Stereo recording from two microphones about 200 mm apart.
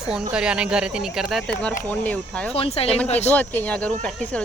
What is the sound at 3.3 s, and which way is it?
Speech, 10° left (ahead or behind).